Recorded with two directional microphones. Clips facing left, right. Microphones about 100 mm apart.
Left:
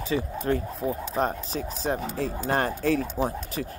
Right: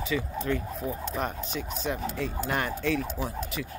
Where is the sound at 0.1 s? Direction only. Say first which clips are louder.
Left 4 dB; 40° left (ahead or behind).